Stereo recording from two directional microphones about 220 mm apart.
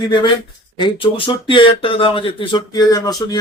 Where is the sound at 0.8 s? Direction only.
25° left (ahead or behind).